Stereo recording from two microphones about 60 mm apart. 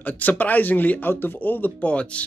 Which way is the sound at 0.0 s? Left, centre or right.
Left.